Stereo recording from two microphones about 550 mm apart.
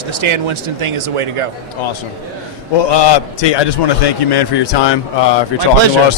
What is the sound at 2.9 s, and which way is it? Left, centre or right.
A man's voice, left.